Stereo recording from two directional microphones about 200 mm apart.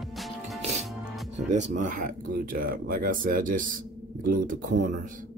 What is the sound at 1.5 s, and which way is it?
Speech, 35° right (ahead or behind).